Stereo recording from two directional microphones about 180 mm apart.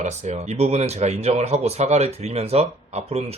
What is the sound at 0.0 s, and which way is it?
Speech, 40° right (ahead or behind).